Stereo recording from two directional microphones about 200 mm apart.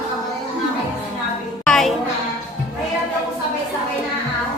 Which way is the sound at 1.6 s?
5° left (ahead or behind).